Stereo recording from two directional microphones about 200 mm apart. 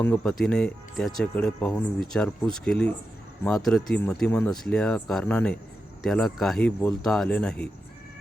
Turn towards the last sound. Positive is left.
turn(degrees=5)  # may be behind; listen again after turning